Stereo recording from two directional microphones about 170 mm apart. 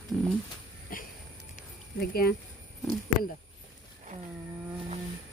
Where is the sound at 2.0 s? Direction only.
65° left (ahead or behind).